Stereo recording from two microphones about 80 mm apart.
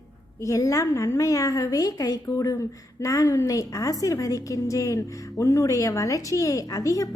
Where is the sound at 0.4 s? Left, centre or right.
Left.